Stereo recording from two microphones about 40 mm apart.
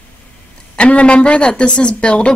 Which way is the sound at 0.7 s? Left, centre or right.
Left.